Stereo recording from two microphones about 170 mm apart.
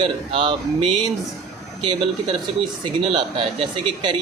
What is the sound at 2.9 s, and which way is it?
Speech, 30° right (ahead or behind).